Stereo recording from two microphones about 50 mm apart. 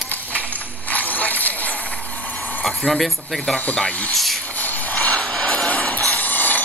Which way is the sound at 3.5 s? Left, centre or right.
Left.